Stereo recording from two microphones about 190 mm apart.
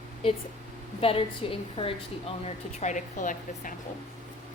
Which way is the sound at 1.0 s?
30° left (ahead or behind).